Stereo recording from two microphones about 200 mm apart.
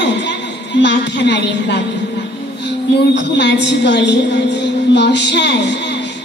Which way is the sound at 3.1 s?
60° left (ahead or behind).